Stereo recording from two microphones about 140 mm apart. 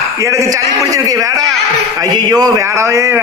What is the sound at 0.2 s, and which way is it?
A man's voice, 20° right (ahead or behind).